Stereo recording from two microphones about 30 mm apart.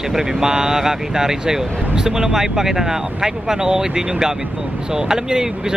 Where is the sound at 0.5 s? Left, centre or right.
Right.